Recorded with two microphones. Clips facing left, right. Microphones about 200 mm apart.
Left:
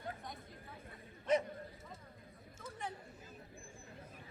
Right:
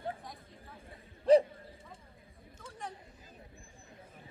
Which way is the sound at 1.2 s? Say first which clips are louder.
Right 10 dB; 30° right (ahead or behind).